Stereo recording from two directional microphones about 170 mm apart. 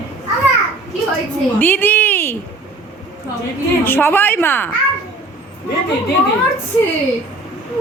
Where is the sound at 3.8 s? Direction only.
10° left (ahead or behind).